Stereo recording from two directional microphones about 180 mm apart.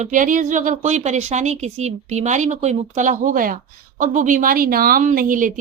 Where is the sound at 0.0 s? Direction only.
45° right (ahead or behind).